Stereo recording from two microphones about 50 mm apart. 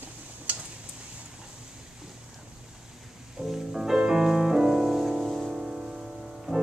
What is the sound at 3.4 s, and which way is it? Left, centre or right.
Music, centre.